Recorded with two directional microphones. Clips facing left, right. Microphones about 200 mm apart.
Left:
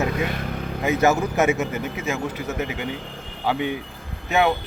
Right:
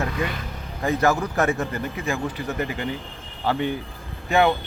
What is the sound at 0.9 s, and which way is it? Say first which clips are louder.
Speech: left 2 dB; 20° left (ahead or behind).